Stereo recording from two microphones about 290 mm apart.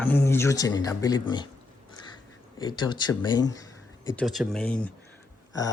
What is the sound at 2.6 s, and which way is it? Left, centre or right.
Speech, centre.